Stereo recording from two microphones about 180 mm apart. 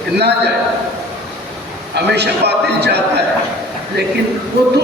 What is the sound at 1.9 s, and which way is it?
A man's voice, 70° right (ahead or behind).